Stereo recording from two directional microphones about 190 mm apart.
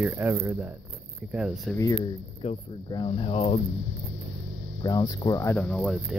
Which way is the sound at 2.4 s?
30° left (ahead or behind).